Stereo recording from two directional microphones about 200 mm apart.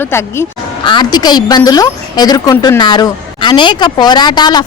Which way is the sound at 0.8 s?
25° left (ahead or behind).